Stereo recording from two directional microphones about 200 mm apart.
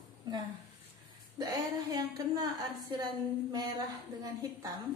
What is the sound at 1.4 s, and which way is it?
A woman's voice, 20° right (ahead or behind).